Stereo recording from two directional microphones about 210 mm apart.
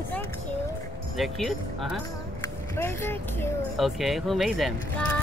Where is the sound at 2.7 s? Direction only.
10° left (ahead or behind).